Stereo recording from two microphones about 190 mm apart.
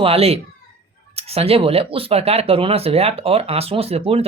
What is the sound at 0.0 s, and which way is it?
Speech, 30° right (ahead or behind).